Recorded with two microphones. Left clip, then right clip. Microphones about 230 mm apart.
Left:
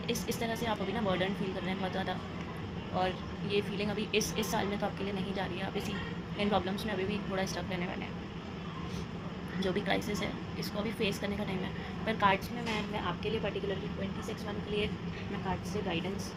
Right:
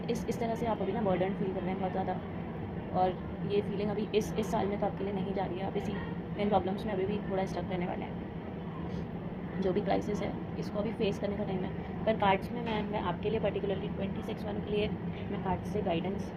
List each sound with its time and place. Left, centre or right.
0.1 s a woman's voice: left
3.0 s a woman's voice: left
9.6 s a woman's voice: left
15.4 s speech: left